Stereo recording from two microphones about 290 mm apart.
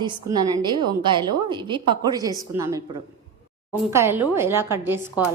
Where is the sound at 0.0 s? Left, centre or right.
Centre.